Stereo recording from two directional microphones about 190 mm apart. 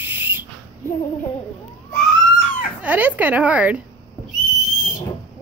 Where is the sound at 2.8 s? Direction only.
10° right (ahead or behind).